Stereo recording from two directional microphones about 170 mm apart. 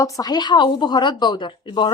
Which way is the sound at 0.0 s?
20° left (ahead or behind).